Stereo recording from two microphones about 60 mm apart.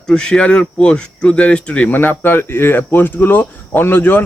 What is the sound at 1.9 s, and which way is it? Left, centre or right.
Speech, left.